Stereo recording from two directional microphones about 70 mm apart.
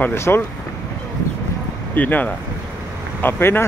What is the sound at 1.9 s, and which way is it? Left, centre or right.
Speech, left.